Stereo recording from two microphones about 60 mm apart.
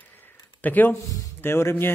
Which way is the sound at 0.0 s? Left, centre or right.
Left.